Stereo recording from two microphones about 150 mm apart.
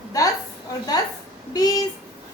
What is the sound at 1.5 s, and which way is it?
Speech, 25° left (ahead or behind).